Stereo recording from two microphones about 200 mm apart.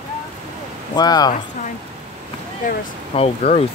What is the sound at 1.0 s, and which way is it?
Speech, 20° left (ahead or behind).